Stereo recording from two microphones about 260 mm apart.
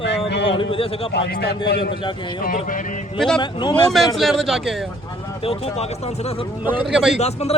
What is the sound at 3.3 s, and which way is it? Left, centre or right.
Speech, centre.